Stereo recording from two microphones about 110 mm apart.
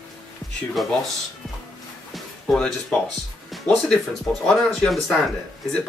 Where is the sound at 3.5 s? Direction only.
5° left (ahead or behind).